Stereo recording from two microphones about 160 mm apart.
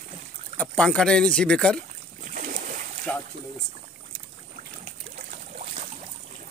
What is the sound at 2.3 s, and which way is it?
Boat, 55° right (ahead or behind).